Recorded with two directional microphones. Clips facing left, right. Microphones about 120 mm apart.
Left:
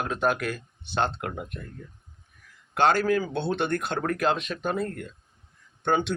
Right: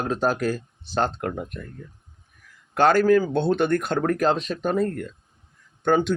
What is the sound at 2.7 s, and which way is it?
Speech, 45° right (ahead or behind).